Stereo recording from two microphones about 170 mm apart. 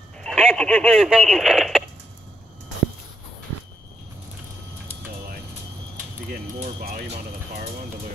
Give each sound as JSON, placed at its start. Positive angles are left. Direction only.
{"t": 0.2, "sound": "speech", "side_deg": 5}
{"t": 6.3, "sound": "speech", "side_deg": -65}